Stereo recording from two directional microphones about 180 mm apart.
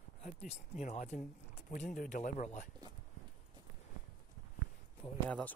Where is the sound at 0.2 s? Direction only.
35° left (ahead or behind).